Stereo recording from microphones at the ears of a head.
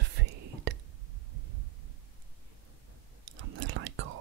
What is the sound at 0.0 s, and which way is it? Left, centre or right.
Whispering, right.